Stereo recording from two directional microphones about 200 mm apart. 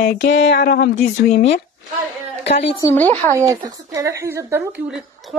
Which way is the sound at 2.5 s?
30° left (ahead or behind).